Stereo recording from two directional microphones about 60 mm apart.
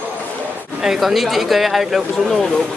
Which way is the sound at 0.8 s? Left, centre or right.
Centre.